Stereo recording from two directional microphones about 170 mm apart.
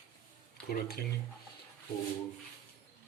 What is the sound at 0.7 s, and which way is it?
Speech, 65° left (ahead or behind).